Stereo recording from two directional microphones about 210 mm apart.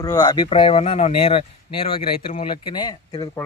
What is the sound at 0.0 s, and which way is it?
Speech, 20° left (ahead or behind).